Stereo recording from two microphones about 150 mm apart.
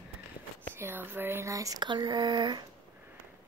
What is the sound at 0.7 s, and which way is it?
Speech, 15° right (ahead or behind).